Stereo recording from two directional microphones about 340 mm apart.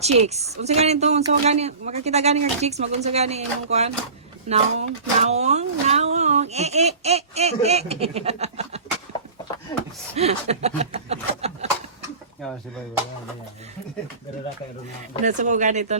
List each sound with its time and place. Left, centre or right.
0.0 s speech: centre
10.2 s speech: centre
12.4 s speech: centre
15.2 s speech: right